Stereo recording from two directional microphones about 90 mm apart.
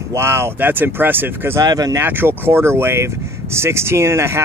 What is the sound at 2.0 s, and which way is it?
Speech, 25° right (ahead or behind).